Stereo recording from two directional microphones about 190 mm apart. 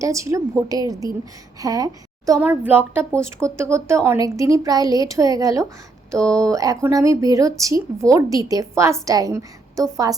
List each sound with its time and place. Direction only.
0.0 s a woman's voice: 15° right (ahead or behind)